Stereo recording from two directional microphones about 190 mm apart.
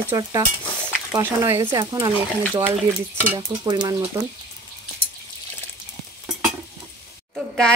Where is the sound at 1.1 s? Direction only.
15° right (ahead or behind).